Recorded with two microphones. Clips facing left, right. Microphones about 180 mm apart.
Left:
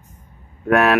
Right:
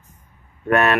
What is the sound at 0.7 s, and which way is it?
Speech, centre (ahead or behind).